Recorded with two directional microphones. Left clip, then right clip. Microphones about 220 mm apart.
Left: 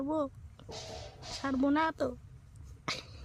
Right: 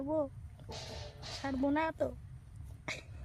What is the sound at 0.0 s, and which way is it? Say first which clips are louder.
Speech: left 1 dB; 45° left (ahead or behind).